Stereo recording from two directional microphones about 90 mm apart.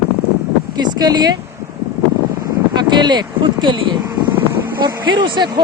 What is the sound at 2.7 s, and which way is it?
Speech, 55° right (ahead or behind).